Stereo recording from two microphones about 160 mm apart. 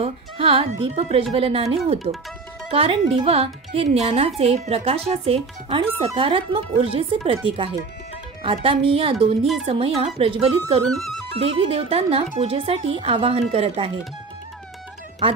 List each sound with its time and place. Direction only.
0.0 s speech: 35° right (ahead or behind)
10.9 s speech: centre (ahead or behind)
11.3 s speech: 40° right (ahead or behind)